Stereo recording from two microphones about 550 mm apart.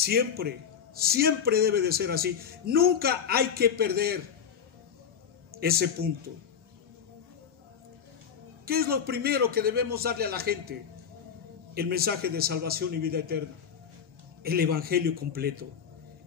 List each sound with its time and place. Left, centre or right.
0.0 s a man's voice: centre
5.6 s speech: centre
8.6 s a man's voice: centre
11.7 s a man's voice: centre
14.4 s a man's voice: centre